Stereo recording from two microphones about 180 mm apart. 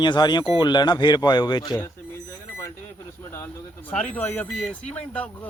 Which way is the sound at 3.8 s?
10° left (ahead or behind).